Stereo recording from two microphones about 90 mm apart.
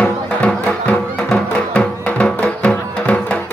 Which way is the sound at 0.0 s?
15° left (ahead or behind).